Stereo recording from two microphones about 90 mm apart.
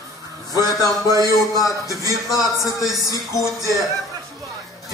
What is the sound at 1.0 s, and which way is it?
A man's voice, 40° right (ahead or behind).